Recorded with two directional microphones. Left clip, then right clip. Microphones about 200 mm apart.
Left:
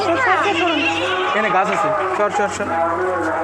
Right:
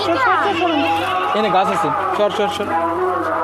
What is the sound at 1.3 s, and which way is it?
Speech, 35° right (ahead or behind).